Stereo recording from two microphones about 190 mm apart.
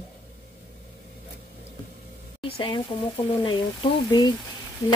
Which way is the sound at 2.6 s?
25° left (ahead or behind).